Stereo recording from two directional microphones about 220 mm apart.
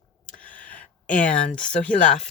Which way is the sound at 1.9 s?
35° left (ahead or behind).